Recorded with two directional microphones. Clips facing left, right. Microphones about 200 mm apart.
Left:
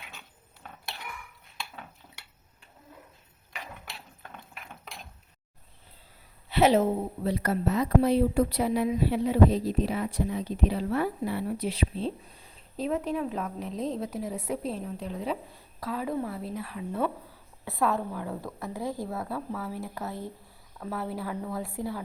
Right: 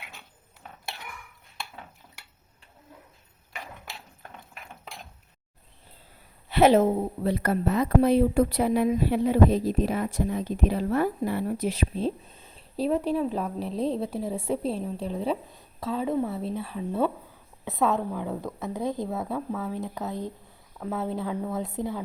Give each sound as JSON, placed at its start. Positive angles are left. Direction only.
{"t": 6.5, "sound": "a woman's voice", "side_deg": -50}